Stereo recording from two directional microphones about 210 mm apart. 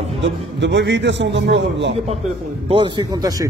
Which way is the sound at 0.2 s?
55° right (ahead or behind).